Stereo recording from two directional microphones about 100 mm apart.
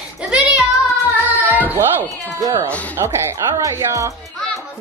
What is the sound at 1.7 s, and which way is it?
Speech, 20° right (ahead or behind).